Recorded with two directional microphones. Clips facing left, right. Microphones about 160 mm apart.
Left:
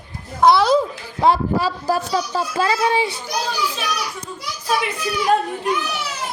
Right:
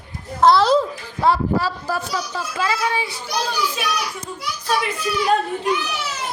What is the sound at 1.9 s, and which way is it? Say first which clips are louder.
A woman's voice: left 4 dB; 35° left (ahead or behind).